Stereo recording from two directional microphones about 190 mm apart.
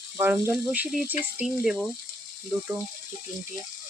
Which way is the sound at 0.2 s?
10° right (ahead or behind).